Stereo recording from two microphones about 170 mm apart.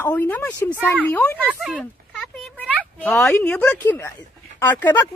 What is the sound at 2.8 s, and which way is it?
Speech, 10° left (ahead or behind).